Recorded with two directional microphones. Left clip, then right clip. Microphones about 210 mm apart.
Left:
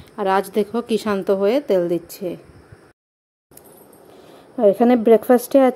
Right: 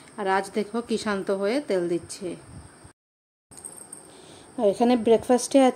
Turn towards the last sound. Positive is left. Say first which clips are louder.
# left 5 dB
turn(degrees=10)  # may be behind; listen again after turning